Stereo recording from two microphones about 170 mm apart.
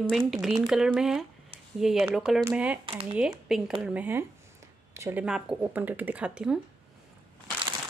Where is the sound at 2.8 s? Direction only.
35° right (ahead or behind).